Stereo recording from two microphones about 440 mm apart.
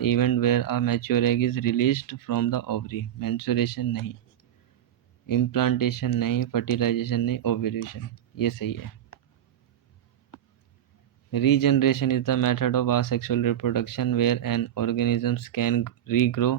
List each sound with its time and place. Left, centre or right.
0.0 s speech: left
5.2 s speech: left
11.3 s speech: left